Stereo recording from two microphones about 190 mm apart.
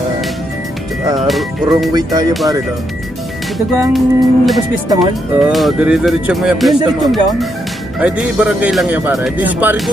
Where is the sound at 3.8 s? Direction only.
Centre (ahead or behind).